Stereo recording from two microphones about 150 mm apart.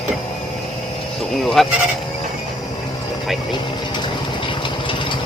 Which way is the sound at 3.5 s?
30° left (ahead or behind).